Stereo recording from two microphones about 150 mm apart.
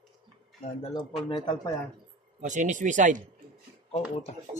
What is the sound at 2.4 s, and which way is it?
Speech, 55° right (ahead or behind).